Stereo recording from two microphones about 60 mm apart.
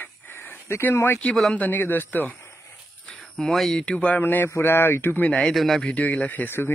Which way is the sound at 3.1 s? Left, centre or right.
Centre.